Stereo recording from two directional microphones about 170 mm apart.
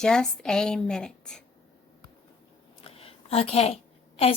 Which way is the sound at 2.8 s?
35° left (ahead or behind).